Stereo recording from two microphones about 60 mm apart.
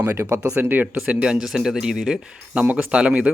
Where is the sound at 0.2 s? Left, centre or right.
Right.